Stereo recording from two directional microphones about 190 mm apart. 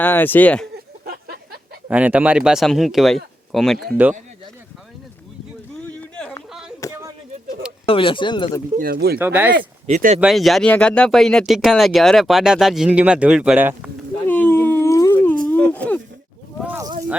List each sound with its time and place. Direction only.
0.0 s speech: 10° left (ahead or behind)
1.0 s a sound: 55° right (ahead or behind)
1.9 s speech: 10° right (ahead or behind)
6.0 s a sound: 5° left (ahead or behind)
7.9 s speech: 25° left (ahead or behind)
8.7 s speech: 50° right (ahead or behind)
9.1 s speech: 10° right (ahead or behind)
9.8 s speech: 40° right (ahead or behind)
10.2 s speech: centre (ahead or behind)
14.3 s dog: 10° left (ahead or behind)
15.4 s a sound: 10° left (ahead or behind)
16.6 s a sound: 15° right (ahead or behind)